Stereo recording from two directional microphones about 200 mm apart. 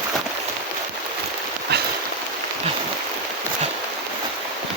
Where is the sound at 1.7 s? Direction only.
55° right (ahead or behind).